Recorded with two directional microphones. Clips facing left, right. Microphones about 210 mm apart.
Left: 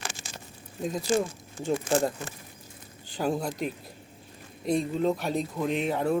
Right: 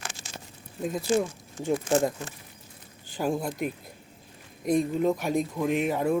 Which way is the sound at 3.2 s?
5° right (ahead or behind).